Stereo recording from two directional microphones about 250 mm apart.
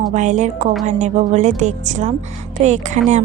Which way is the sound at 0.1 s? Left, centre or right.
Right.